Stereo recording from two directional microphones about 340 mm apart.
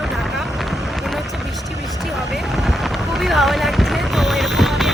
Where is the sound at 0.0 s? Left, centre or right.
Centre.